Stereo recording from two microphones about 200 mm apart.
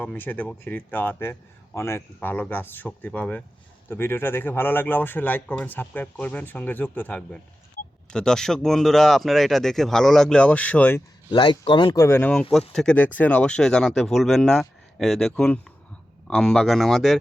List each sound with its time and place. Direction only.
0.0 s speech: 10° left (ahead or behind)
11.3 s speech: 25° left (ahead or behind); by 17.2 s centre (ahead or behind)